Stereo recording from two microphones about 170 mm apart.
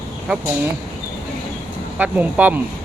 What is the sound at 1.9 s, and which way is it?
Speech, 10° right (ahead or behind).